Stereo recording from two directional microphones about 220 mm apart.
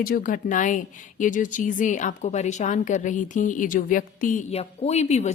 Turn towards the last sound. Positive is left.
turn(degrees=30)  # may be behind; listen again after turning